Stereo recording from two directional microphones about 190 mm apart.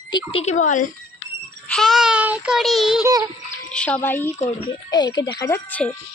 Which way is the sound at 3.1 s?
20° right (ahead or behind).